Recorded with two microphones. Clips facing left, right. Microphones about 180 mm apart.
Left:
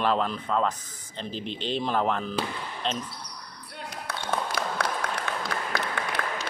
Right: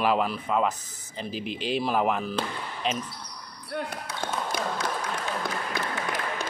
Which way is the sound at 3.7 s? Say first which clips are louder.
Right 9 dB; 55° right (ahead or behind).